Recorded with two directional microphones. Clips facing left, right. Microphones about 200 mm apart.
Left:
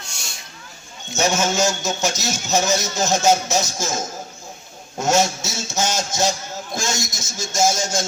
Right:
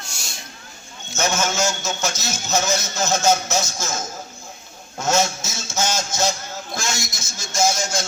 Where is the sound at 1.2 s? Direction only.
15° left (ahead or behind).